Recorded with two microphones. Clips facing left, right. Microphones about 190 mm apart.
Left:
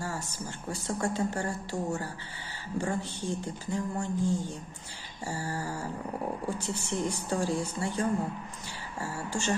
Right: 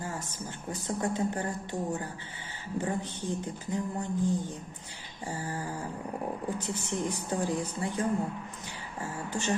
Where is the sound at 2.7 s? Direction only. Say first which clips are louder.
Even; 20° right (ahead or behind).